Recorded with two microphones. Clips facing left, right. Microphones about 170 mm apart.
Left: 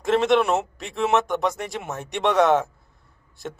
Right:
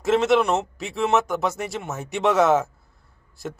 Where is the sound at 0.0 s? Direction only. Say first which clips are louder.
Even; 5° right (ahead or behind).